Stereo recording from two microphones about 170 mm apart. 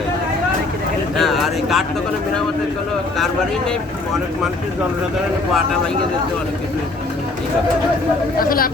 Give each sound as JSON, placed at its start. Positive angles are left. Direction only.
{"t": 1.2, "sound": "speech", "side_deg": 0}
{"t": 8.4, "sound": "speech", "side_deg": 60}